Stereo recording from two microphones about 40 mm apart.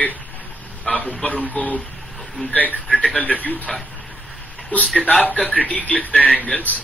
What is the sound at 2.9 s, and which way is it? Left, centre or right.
Speech, left.